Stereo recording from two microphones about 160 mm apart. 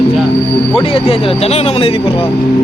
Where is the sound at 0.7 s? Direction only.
35° left (ahead or behind).